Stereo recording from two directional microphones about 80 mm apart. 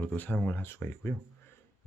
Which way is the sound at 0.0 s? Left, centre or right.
Left.